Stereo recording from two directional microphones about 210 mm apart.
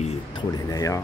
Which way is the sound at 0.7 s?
15° left (ahead or behind).